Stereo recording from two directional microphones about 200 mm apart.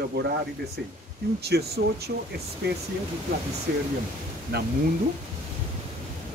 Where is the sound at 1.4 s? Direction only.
55° right (ahead or behind).